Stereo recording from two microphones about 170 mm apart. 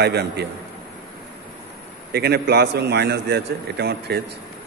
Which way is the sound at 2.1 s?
70° right (ahead or behind).